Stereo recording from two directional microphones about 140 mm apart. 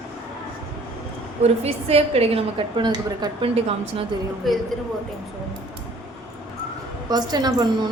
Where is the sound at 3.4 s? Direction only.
40° right (ahead or behind).